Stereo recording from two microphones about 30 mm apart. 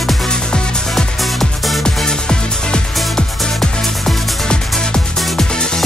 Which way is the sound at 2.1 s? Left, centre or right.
Left.